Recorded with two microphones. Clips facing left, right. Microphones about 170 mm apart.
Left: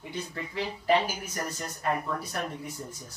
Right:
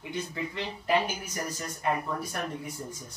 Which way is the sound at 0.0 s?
5° right (ahead or behind).